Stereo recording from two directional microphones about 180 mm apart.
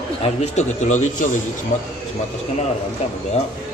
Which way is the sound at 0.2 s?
40° left (ahead or behind).